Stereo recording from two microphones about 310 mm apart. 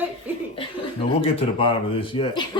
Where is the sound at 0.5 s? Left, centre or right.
Centre.